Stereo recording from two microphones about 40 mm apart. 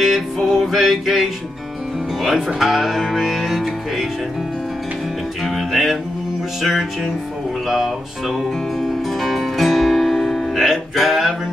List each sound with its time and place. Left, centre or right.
0.0 s music: centre
2.2 s speech: centre
5.4 s music: centre
6.6 s speech: centre
7.6 s music: centre